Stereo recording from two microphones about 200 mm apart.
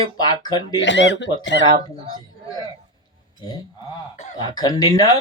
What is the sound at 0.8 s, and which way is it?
Speech, 65° left (ahead or behind).